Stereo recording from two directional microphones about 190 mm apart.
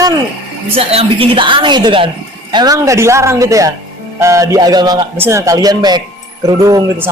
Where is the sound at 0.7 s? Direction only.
30° right (ahead or behind).